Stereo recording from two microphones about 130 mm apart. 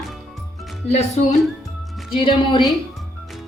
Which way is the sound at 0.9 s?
55° left (ahead or behind).